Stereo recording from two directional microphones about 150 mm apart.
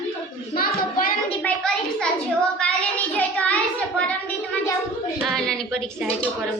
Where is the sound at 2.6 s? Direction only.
10° left (ahead or behind).